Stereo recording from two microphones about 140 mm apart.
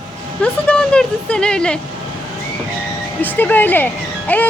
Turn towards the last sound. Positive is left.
turn(degrees=10)  # may be behind; listen again after turning